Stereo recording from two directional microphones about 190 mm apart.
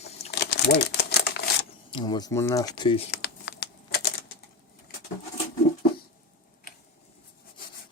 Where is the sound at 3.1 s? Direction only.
60° left (ahead or behind).